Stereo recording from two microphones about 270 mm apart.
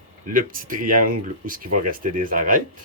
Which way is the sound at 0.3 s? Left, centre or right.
Right.